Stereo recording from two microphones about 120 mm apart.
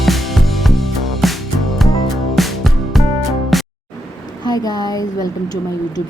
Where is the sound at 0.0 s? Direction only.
Centre (ahead or behind).